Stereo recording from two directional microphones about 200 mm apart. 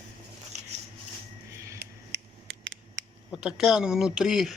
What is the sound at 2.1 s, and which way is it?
Scissors, 70° right (ahead or behind).